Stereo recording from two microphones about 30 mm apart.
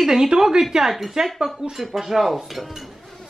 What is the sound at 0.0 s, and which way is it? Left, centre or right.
Speech, centre.